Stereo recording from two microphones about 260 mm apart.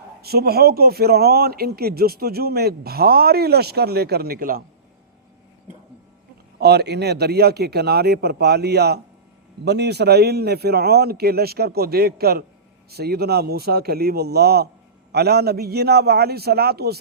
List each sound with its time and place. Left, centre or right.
0.2 s speech: right
6.6 s speech: right